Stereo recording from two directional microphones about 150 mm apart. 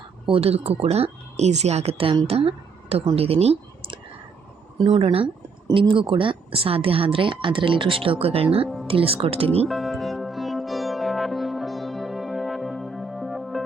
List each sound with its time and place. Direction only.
0.3 s a woman's voice: 40° right (ahead or behind)
8.6 s music: centre (ahead or behind)
8.9 s a woman's voice: 40° right (ahead or behind)
9.6 s music: centre (ahead or behind)